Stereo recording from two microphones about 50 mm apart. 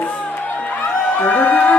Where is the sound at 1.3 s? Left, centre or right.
Left.